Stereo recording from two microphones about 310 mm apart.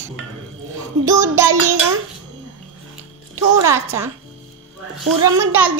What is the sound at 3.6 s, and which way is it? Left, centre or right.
Speech, centre.